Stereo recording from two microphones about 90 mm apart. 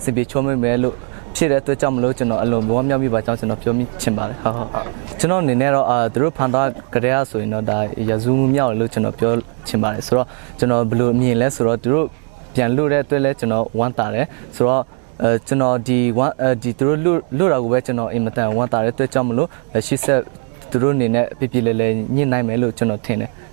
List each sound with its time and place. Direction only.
0.0 s speech: 15° right (ahead or behind)